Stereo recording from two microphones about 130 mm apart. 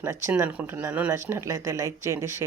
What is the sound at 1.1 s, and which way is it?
Speech, 20° right (ahead or behind).